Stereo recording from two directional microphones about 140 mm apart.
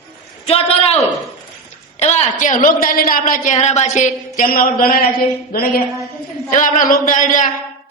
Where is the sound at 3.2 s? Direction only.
60° left (ahead or behind); by 5.1 s 90° left.